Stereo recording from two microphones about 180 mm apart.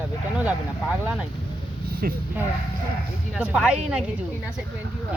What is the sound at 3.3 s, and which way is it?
Speech, 5° right (ahead or behind).